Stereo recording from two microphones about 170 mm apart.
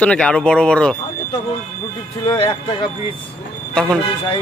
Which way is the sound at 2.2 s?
25° left (ahead or behind).